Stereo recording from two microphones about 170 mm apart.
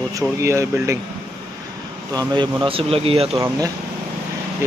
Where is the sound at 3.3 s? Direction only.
20° right (ahead or behind).